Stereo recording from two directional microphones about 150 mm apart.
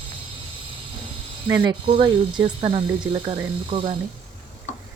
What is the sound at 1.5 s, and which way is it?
Speech, 20° right (ahead or behind).